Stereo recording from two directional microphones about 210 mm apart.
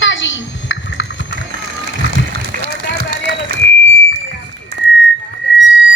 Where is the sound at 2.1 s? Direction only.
45° right (ahead or behind).